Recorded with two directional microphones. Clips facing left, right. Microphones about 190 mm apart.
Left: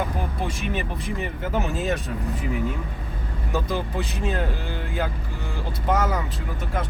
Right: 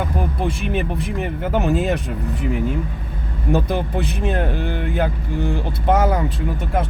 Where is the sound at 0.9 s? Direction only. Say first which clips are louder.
Right 5 dB; 55° right (ahead or behind).